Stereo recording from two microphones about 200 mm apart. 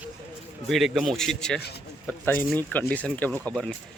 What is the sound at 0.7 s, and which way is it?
Speech, centre (ahead or behind).